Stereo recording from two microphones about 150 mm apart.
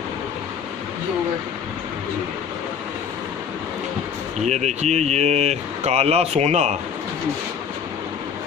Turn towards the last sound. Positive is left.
turn(degrees=-45)  # may be behind; listen again after turning